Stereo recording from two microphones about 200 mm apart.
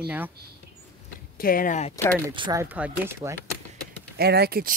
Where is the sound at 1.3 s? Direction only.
45° left (ahead or behind).